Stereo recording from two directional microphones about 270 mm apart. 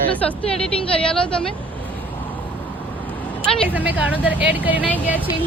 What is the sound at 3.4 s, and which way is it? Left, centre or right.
Speech, centre.